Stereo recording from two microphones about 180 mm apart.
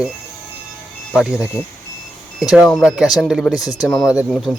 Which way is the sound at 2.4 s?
Centre (ahead or behind).